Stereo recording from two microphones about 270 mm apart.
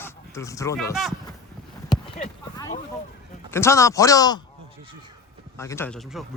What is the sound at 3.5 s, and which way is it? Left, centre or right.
Speech, centre.